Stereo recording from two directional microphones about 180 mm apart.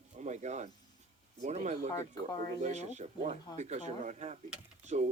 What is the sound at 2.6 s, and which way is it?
Speech, 40° right (ahead or behind).